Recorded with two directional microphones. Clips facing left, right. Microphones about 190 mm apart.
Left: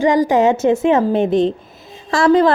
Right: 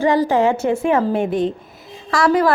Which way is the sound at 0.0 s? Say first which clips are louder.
Left 2 dB; 15° left (ahead or behind).